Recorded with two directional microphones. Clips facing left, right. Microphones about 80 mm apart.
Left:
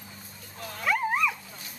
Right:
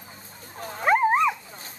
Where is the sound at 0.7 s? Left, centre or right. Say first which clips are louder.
Right 7 dB; right.